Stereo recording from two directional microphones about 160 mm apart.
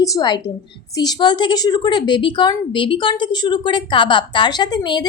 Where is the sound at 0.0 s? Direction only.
25° left (ahead or behind).